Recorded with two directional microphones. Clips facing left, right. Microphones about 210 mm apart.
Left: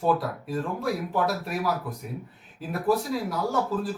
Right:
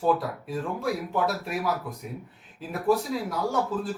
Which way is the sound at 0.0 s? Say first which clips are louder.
Even; centre (ahead or behind).